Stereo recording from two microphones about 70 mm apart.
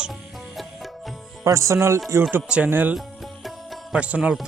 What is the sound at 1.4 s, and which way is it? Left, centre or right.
Speech, right.